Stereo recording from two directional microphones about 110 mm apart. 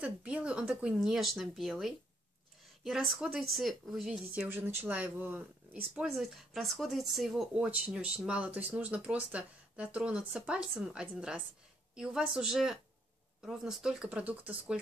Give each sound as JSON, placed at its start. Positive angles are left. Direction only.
{"t": 0.0, "sound": "speech", "side_deg": -10}
{"t": 4.3, "sound": "speech", "side_deg": -15}
{"t": 6.0, "sound": "speech", "side_deg": 0}